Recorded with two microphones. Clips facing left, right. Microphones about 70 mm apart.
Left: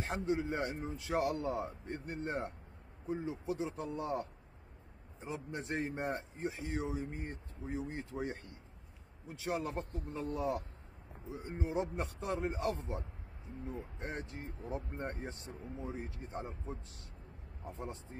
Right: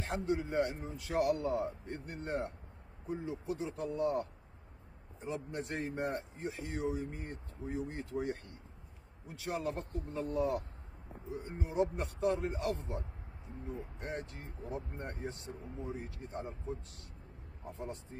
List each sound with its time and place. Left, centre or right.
0.0 s speech: left